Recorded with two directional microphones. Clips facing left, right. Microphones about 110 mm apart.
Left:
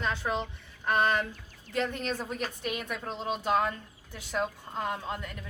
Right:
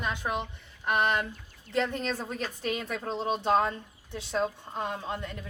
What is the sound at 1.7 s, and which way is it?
A woman's voice, 30° right (ahead or behind).